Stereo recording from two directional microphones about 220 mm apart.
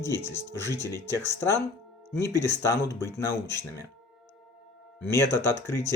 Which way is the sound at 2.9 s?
10° left (ahead or behind).